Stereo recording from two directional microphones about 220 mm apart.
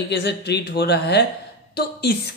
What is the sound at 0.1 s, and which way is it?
A woman's voice, 50° left (ahead or behind).